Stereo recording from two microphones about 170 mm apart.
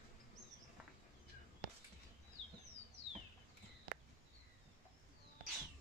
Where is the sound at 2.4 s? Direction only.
90° right.